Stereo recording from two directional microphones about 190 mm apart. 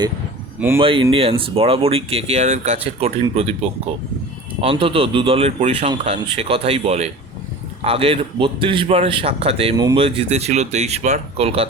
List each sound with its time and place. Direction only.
0.8 s a man's voice: 30° right (ahead or behind)
4.6 s a man's voice: 30° right (ahead or behind)